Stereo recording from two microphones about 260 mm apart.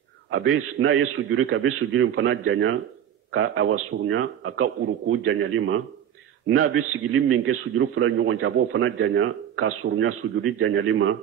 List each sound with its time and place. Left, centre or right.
0.3 s a man's voice: right